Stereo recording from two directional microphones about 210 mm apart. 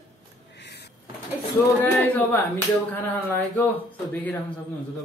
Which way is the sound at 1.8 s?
10° left (ahead or behind).